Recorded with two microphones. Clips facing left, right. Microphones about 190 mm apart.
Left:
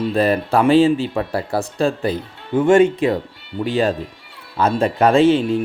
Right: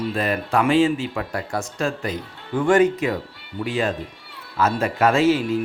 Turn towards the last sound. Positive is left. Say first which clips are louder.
# left 4 dB
turn(degrees=30)  # may be behind; listen again after turning